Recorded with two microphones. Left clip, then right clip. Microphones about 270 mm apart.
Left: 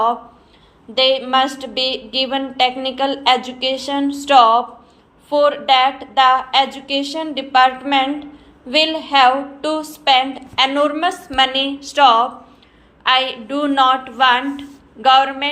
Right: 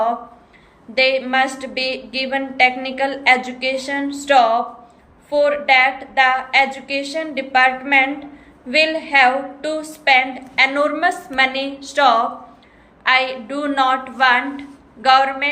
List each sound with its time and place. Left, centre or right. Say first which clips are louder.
0.9 s a woman's voice: left 1 dB; centre